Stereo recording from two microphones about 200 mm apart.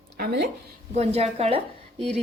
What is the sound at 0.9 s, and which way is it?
Speech, 30° right (ahead or behind).